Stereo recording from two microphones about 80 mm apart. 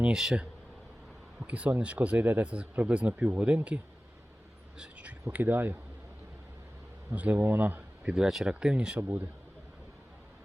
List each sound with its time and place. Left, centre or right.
0.0 s speech: centre
4.8 s a sound: centre
5.3 s speech: right
7.1 s speech: centre
8.1 s speech: centre
9.0 s speech: right